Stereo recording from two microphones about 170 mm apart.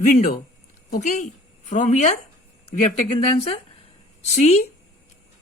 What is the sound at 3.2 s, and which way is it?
Speech, 35° left (ahead or behind).